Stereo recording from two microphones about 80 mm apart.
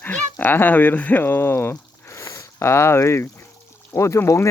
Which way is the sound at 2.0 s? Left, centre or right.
Left.